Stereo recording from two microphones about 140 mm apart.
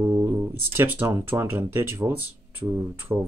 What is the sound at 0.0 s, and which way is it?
Guitar, 20° right (ahead or behind).